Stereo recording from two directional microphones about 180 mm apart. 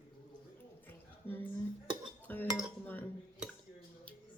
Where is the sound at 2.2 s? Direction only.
10° left (ahead or behind).